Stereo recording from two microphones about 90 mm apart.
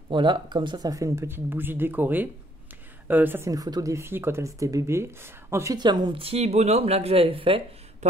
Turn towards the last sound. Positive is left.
turn(degrees=-85)